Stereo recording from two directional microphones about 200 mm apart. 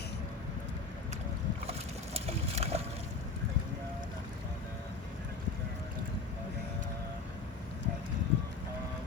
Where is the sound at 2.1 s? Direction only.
30° right (ahead or behind).